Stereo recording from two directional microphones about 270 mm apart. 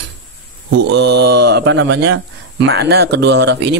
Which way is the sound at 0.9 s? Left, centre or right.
Right.